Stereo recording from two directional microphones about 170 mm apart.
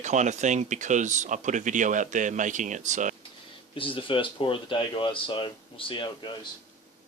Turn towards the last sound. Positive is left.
turn(degrees=30)  # may be behind; listen again after turning